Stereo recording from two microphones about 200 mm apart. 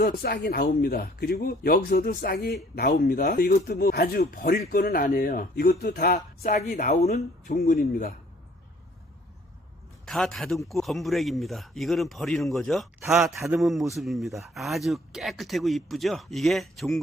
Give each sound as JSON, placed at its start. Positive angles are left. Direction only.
{"t": 0.0, "sound": "speech", "side_deg": 50}
{"t": 6.1, "sound": "speech", "side_deg": 40}
{"t": 7.5, "sound": "speech", "side_deg": 50}
{"t": 10.1, "sound": "speech", "side_deg": 0}